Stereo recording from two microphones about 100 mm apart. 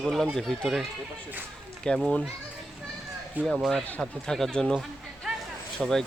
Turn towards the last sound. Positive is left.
turn(degrees=5)  # may be behind; listen again after turning